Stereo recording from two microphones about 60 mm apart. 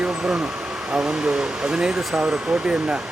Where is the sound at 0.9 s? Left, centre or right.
Centre.